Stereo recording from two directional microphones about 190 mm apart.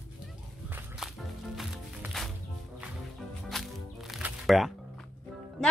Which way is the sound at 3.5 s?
Centre (ahead or behind).